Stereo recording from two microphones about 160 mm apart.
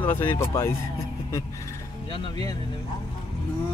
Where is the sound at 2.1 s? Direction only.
35° left (ahead or behind).